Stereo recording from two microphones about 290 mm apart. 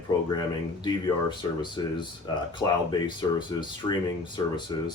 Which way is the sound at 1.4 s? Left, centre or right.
Centre.